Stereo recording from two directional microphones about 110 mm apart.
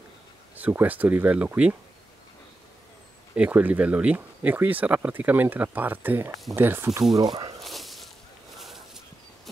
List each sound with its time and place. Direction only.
0.6 s speech: 15° right (ahead or behind)
3.3 s speech: 15° right (ahead or behind)
7.2 s speech: 35° right (ahead or behind)
7.6 s a sound: centre (ahead or behind)